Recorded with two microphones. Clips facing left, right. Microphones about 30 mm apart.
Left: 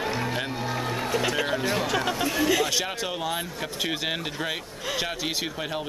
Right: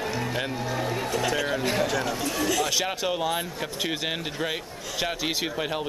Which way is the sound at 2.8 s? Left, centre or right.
Centre.